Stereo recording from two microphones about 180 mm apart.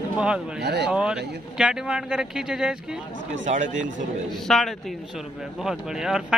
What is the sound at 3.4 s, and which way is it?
Speech, 45° right (ahead or behind).